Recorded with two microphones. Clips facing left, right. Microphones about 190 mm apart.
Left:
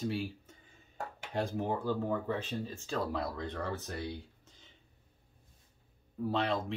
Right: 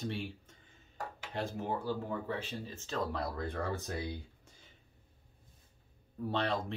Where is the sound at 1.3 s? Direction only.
15° left (ahead or behind).